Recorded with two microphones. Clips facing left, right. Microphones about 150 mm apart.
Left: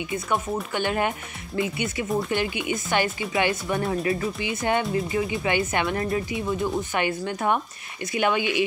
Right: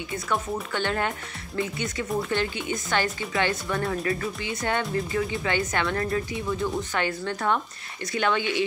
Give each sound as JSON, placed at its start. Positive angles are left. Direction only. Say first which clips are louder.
{"t": 0.1, "sound": "speech", "louder": "left 1 dB", "side_deg": 15}